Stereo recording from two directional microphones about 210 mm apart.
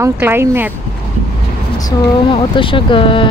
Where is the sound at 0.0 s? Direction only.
10° right (ahead or behind).